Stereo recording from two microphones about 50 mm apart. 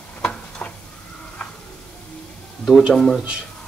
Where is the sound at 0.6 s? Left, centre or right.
Left.